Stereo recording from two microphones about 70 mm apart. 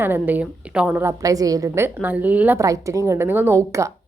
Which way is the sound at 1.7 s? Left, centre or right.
Right.